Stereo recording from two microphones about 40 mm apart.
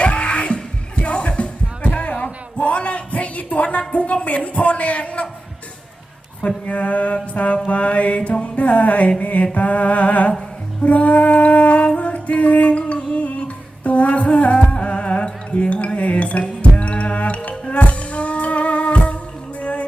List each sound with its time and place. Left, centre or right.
0.0 s music: left
6.7 s mantra: left
8.6 s mantra: left
10.8 s a sound: left
11.9 s music: left